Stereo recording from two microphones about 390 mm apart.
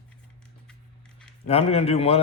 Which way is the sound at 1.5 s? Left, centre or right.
Centre.